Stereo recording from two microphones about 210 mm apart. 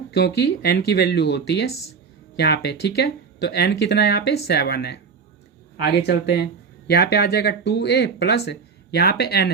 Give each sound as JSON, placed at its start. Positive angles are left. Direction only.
{"t": 0.1, "sound": "speech", "side_deg": 50}